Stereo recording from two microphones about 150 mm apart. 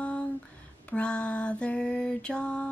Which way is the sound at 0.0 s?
10° left (ahead or behind).